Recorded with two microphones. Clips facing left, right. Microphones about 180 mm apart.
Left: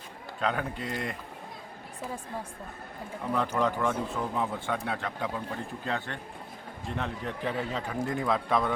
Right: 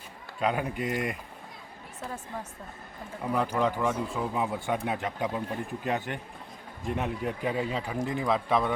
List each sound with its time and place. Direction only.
0.3 s speech: 15° right (ahead or behind)
3.3 s speech: 10° right (ahead or behind)